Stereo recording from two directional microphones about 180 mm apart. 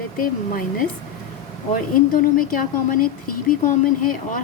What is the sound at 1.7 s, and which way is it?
Speech, 50° left (ahead or behind).